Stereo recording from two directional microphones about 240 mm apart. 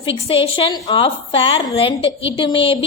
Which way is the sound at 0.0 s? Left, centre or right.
Left.